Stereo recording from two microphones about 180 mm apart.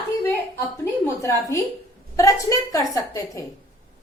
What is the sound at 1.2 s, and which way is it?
A woman's voice, 15° left (ahead or behind).